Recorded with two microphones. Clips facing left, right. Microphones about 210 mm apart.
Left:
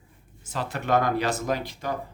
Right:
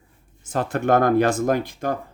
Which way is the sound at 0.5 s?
50° right (ahead or behind).